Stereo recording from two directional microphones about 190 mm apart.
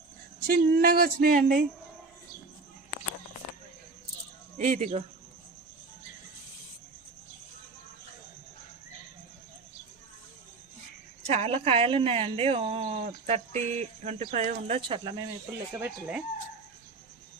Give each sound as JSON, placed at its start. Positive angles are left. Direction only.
{"t": 0.3, "sound": "speech", "side_deg": -50}
{"t": 4.5, "sound": "speech", "side_deg": -40}
{"t": 11.3, "sound": "speech", "side_deg": -30}
{"t": 14.8, "sound": "speech", "side_deg": -25}
{"t": 15.7, "sound": "speech", "side_deg": -10}